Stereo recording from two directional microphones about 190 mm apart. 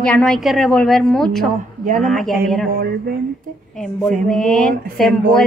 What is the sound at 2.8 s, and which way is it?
Speech, 50° right (ahead or behind).